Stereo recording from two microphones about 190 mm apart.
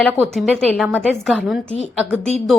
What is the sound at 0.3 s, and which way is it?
A woman's voice, centre (ahead or behind).